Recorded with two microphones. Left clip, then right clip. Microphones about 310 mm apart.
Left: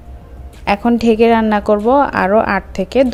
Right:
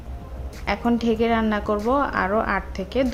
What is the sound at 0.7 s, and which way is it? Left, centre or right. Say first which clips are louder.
A woman's voice: left 9 dB; left.